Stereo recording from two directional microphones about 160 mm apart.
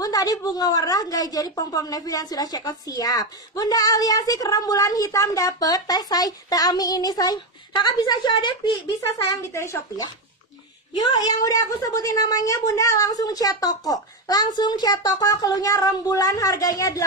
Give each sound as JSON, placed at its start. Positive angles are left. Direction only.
{"t": 0.0, "sound": "a woman's voice", "side_deg": 20}
{"t": 9.3, "sound": "a woman's voice", "side_deg": 20}
{"t": 11.1, "sound": "a woman's voice", "side_deg": 20}